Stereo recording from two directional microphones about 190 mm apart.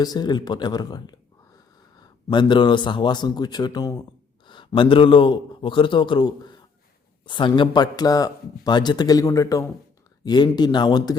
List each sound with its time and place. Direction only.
0.0 s speech: 20° left (ahead or behind)